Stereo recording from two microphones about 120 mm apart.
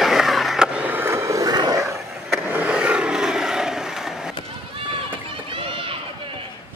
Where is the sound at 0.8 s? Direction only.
20° right (ahead or behind).